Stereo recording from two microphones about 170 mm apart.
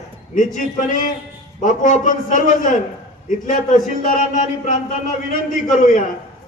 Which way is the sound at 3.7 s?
50° left (ahead or behind).